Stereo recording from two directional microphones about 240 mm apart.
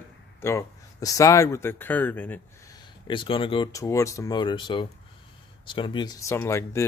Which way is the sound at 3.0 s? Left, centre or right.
Left.